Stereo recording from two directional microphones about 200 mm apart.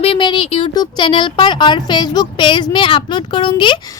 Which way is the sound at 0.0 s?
25° left (ahead or behind).